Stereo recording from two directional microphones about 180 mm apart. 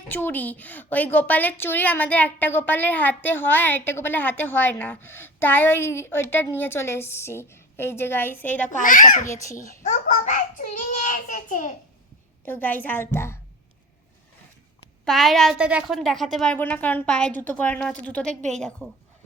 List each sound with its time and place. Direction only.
0.1 s a woman's voice: 10° left (ahead or behind)
8.7 s a child's voice: 50° left (ahead or behind)
9.2 s a woman's voice: 15° left (ahead or behind)
9.8 s a child's voice: 45° left (ahead or behind)
12.5 s a woman's voice: 10° left (ahead or behind)
15.0 s a woman's voice: centre (ahead or behind)